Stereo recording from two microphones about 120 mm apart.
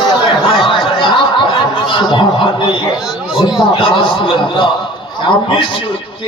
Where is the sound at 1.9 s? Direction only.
45° left (ahead or behind).